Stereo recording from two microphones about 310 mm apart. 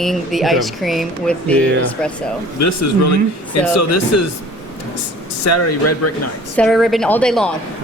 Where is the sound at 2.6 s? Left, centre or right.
Left.